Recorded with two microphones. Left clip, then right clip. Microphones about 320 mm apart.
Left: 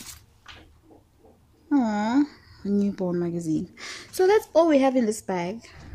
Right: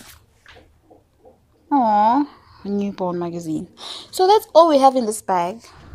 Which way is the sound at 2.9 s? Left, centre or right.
Right.